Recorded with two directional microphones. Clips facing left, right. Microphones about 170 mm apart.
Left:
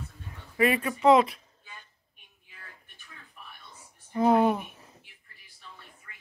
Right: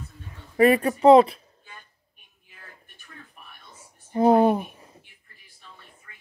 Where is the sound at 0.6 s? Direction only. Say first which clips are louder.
Right 7 dB; 40° right (ahead or behind).